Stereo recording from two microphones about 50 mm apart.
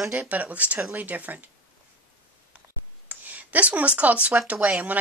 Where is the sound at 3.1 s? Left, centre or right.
Right.